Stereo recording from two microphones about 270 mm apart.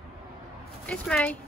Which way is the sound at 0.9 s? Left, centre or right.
Centre.